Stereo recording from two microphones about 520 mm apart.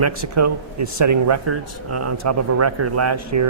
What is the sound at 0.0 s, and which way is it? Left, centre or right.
A man's voice, right.